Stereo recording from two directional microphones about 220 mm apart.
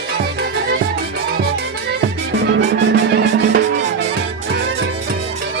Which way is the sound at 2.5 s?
55° right (ahead or behind).